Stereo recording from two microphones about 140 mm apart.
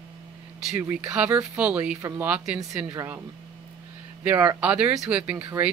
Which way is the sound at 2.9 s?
20° right (ahead or behind).